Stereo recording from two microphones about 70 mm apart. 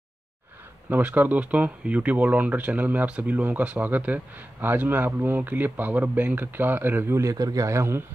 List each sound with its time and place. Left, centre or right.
0.8 s speech: right
7.2 s a man's voice: right